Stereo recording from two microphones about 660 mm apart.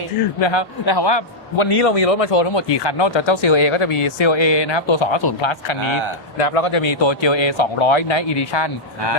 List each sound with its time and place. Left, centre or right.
0.4 s a man's voice: left
5.8 s speech: right
6.4 s speech: left